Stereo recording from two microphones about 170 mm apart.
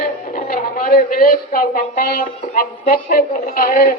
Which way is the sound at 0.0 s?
60° left (ahead or behind).